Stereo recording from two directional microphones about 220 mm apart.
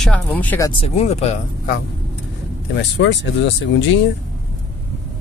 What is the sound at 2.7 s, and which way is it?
Speech, 55° left (ahead or behind).